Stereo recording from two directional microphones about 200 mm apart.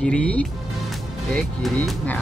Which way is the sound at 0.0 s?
5° left (ahead or behind).